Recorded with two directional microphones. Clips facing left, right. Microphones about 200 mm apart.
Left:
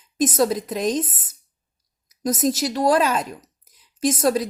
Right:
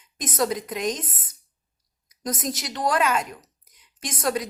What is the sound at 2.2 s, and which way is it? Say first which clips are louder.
A woman's voice: left 8 dB; 30° left (ahead or behind).